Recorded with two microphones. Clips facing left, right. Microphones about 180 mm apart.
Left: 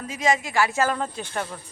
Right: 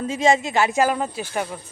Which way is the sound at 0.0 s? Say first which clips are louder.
Right 5 dB; 25° right (ahead or behind).